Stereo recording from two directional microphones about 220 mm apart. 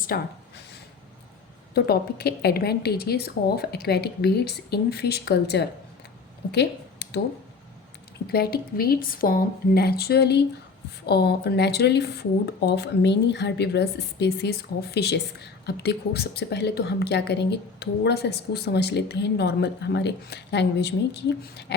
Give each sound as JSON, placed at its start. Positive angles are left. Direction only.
{"t": 0.1, "sound": "speech", "side_deg": 45}
{"t": 1.7, "sound": "speech", "side_deg": 45}
{"t": 8.3, "sound": "speech", "side_deg": 45}